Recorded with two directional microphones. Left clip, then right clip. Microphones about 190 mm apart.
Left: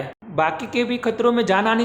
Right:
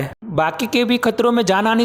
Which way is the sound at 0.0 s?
50° right (ahead or behind).